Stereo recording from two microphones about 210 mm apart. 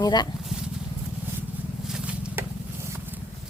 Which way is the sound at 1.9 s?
5° right (ahead or behind).